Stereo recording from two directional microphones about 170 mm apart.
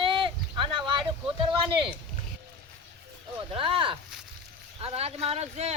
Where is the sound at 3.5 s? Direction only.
30° right (ahead or behind).